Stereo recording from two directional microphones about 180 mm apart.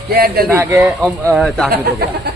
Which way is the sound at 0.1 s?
60° right (ahead or behind).